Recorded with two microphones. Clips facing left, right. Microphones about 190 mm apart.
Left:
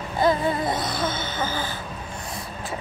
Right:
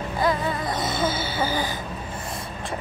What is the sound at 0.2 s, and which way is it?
Music, 25° left (ahead or behind).